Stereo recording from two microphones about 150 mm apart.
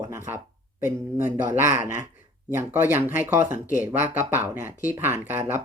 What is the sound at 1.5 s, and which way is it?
Speech, 60° left (ahead or behind).